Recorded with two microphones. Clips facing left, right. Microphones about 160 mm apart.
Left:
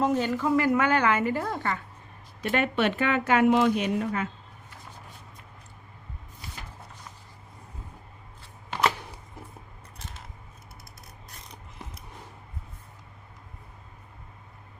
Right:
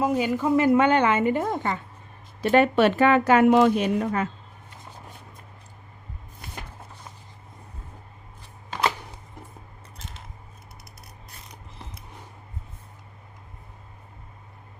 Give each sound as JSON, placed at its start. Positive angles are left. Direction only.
{"t": 0.0, "sound": "a woman's voice", "side_deg": -10}
{"t": 2.4, "sound": "speech", "side_deg": -35}